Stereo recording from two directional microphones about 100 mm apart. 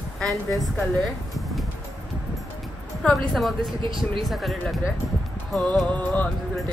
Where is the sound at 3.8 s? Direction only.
55° right (ahead or behind).